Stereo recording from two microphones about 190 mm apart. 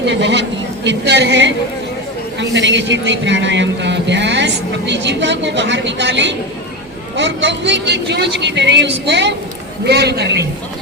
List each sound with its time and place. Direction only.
0.0 s a woman's voice: 65° right (ahead or behind)